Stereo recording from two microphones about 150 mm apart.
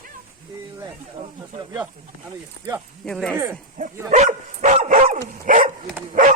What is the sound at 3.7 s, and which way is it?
Dog, 55° right (ahead or behind).